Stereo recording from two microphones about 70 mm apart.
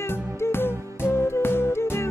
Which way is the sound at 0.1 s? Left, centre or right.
Left.